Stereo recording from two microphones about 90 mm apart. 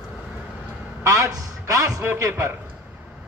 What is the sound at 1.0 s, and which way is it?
A man's voice, 35° right (ahead or behind).